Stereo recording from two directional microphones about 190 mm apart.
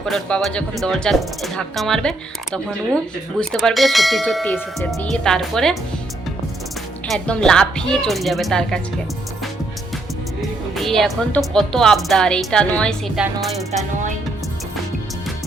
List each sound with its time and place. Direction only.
0.0 s speech: 5° left (ahead or behind)
7.1 s speech: 5° left (ahead or behind)
10.8 s speech: centre (ahead or behind)